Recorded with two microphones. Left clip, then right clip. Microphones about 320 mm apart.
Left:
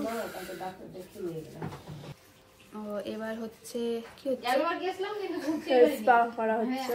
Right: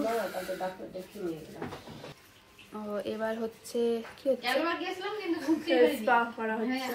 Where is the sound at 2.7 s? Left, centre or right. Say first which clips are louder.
Right 1 dB; centre.